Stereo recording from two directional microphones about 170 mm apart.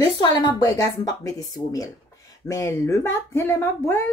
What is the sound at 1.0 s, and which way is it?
Speech, 20° left (ahead or behind).